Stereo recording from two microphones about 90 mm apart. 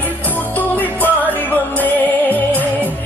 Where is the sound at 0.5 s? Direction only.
20° left (ahead or behind).